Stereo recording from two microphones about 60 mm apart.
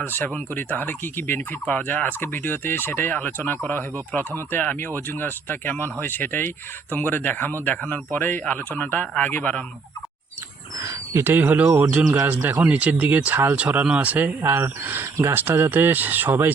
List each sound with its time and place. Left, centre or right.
0.0 s fowl: left
1.4 s fowl: left
4.6 s speech: left
4.9 s fowl: left
7.8 s speech: left
10.8 s a sound: right
11.2 s speech: right
14.4 s speech: right